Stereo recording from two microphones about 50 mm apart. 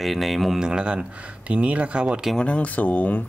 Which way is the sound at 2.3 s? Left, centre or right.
Left.